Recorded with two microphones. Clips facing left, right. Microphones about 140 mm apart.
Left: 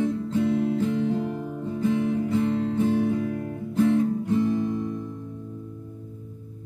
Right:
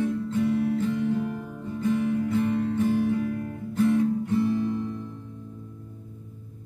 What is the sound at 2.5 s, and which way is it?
Music, 25° left (ahead or behind).